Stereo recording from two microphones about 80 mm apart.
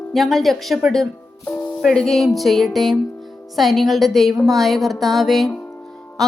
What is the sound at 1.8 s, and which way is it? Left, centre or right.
Speech, centre.